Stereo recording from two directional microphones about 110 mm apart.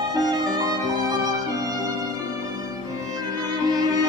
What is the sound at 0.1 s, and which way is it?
Violin, 35° right (ahead or behind).